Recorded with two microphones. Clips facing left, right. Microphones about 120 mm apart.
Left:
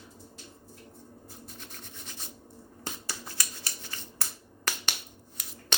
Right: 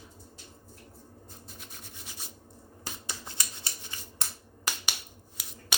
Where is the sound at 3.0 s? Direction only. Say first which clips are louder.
Left 1 dB; 20° right (ahead or behind).